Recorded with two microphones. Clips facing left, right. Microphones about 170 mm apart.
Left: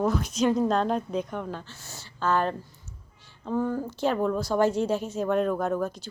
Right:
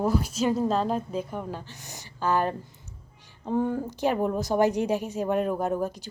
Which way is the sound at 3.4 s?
25° right (ahead or behind).